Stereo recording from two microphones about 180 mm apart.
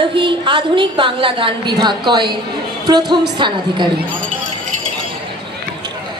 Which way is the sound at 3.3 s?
25° right (ahead or behind).